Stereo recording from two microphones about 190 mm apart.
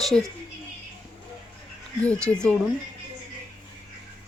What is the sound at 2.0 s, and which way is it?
Speech, 5° left (ahead or behind).